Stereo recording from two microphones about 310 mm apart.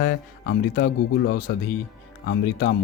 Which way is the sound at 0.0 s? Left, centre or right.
Left.